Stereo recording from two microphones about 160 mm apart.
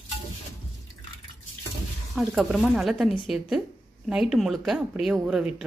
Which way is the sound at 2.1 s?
5° right (ahead or behind).